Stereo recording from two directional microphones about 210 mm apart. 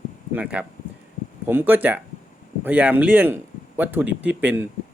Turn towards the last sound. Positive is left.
turn(degrees=-10)  # may be behind; listen again after turning